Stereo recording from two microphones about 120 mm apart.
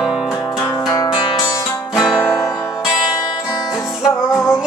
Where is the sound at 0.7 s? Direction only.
30° left (ahead or behind).